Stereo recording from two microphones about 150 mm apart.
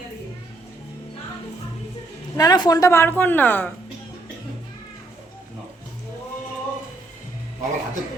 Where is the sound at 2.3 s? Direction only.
25° left (ahead or behind).